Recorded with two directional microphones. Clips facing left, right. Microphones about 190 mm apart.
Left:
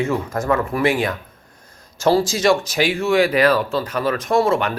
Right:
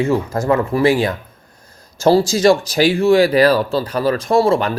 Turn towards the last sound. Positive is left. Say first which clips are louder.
# right 3 dB
turn(degrees=-35)  # may be behind; listen again after turning